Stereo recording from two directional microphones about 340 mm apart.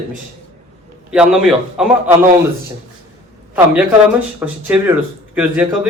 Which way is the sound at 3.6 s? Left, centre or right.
Centre.